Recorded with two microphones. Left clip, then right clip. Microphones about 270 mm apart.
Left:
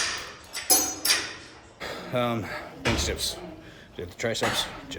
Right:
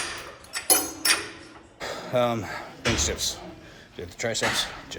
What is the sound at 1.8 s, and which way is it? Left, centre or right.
Speech, centre.